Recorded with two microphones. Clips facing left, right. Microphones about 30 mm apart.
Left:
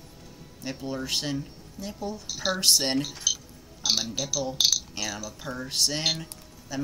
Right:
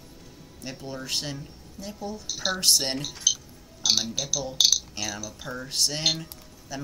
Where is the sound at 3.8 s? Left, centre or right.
Right.